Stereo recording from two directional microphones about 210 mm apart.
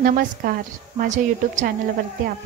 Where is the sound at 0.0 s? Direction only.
40° right (ahead or behind).